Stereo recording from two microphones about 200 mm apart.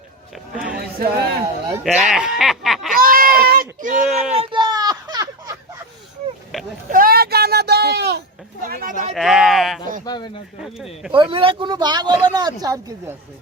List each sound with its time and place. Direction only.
0.9 s speech: 50° right (ahead or behind)
1.8 s speech: centre (ahead or behind)
2.9 s a sound: 45° right (ahead or behind)
4.4 s a sound: 20° right (ahead or behind)
6.9 s a sound: 50° right (ahead or behind)
8.6 s speech: 45° right (ahead or behind)
9.1 s speech: centre (ahead or behind)
10.1 s speech: 20° left (ahead or behind)
11.1 s speech: 25° right (ahead or behind)